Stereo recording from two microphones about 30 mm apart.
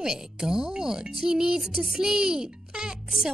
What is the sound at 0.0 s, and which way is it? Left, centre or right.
Speech, right.